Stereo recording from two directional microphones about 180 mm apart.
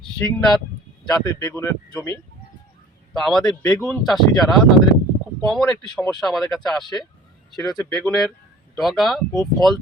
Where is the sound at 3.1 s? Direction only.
Centre (ahead or behind).